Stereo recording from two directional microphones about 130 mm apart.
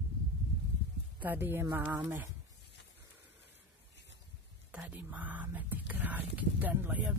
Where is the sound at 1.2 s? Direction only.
15° right (ahead or behind).